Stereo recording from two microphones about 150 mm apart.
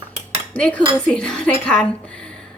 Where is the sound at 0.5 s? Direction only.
10° left (ahead or behind).